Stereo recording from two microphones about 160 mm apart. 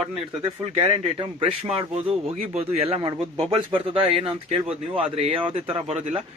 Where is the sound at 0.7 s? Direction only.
35° right (ahead or behind).